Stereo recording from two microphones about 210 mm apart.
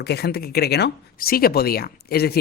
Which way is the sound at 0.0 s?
50° left (ahead or behind).